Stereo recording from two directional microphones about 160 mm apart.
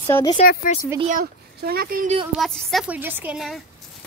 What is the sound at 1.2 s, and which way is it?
Speech, 75° right (ahead or behind).